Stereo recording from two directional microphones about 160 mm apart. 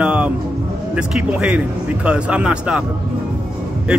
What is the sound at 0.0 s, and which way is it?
Music, 5° right (ahead or behind).